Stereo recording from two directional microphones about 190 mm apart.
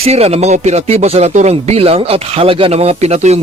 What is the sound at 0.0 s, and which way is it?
Speech, 35° right (ahead or behind).